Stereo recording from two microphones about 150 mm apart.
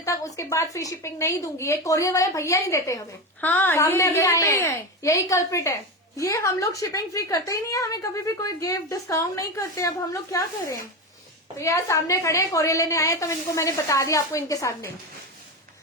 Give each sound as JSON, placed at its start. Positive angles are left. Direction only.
{"t": 0.0, "sound": "a woman's voice", "side_deg": 20}